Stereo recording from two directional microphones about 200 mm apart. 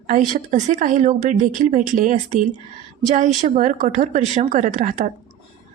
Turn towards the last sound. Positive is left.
turn(degrees=-40)  # may be behind; listen again after turning